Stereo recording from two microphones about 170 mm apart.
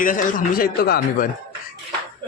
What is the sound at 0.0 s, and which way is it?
A man's voice, 55° left (ahead or behind).